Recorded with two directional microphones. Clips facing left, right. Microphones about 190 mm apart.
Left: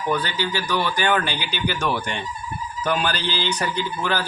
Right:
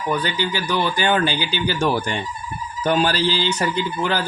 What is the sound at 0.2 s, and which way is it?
A man's voice, 20° right (ahead or behind).